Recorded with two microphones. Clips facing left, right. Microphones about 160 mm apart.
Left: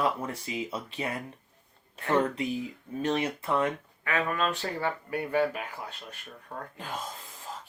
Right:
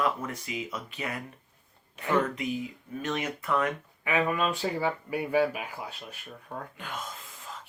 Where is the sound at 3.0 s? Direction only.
30° left (ahead or behind).